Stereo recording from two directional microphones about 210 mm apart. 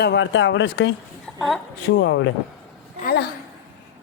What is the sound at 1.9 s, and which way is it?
Speech, 55° left (ahead or behind).